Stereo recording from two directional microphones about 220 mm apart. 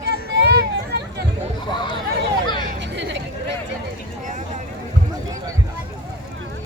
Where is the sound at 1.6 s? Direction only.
20° left (ahead or behind).